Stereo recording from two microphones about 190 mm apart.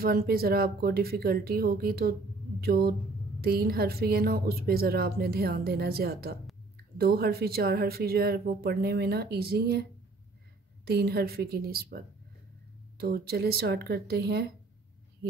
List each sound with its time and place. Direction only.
0.0 s a woman's voice: 55° right (ahead or behind)
10.9 s a woman's voice: 55° right (ahead or behind)